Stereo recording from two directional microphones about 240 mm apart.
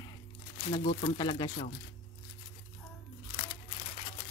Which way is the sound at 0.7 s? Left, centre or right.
Left.